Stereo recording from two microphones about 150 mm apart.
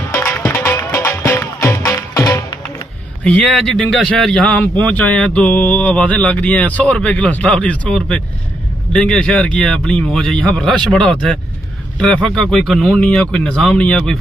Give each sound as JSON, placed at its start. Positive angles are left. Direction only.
{"t": 0.1, "sound": "music", "side_deg": 15}
{"t": 3.3, "sound": "a man's voice", "side_deg": 5}